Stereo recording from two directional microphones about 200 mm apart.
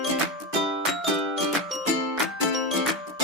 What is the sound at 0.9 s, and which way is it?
Music, centre (ahead or behind).